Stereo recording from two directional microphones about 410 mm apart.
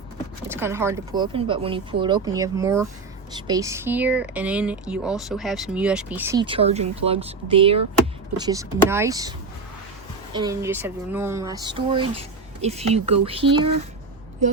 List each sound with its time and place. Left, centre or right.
0.4 s speech: centre
10.3 s speech: centre